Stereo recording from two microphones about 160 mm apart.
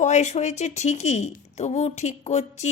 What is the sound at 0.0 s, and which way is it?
A woman's voice, 45° left (ahead or behind).